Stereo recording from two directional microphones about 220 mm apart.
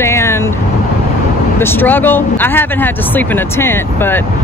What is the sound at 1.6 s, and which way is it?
Speech, 10° left (ahead or behind).